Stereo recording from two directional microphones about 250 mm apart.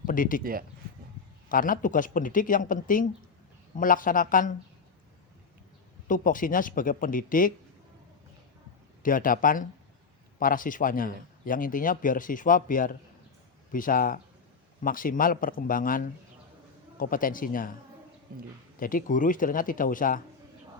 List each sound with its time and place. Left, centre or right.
0.0 s speech: left
1.5 s speech: left
6.1 s speech: left
9.0 s speech: left
18.3 s a man's voice: right
18.8 s speech: left